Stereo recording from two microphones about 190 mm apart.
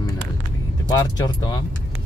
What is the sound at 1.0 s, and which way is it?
Speech, 20° left (ahead or behind).